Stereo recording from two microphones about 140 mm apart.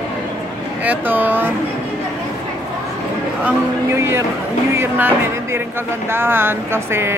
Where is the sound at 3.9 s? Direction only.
15° right (ahead or behind).